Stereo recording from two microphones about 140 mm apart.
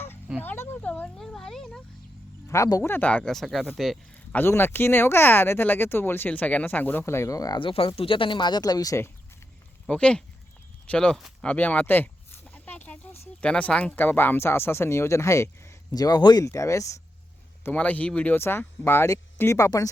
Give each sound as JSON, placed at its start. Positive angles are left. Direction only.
{"t": 0.4, "sound": "speech", "side_deg": 15}
{"t": 2.5, "sound": "speech", "side_deg": 25}
{"t": 4.4, "sound": "speech", "side_deg": 15}
{"t": 7.7, "sound": "speech", "side_deg": 40}
{"t": 9.8, "sound": "speech", "side_deg": 5}